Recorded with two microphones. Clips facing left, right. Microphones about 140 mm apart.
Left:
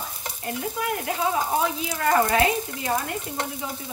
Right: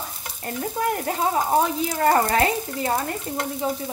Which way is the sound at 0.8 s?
35° right (ahead or behind).